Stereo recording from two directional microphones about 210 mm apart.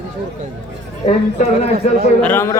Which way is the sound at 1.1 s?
35° left (ahead or behind).